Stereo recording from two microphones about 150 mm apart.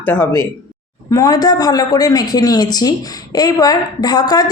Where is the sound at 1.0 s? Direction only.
25° left (ahead or behind).